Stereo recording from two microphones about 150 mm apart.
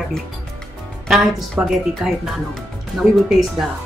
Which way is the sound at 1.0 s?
Centre (ahead or behind).